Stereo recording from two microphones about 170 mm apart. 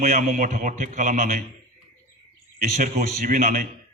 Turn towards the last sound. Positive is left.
turn(degrees=-50)  # may be behind; listen again after turning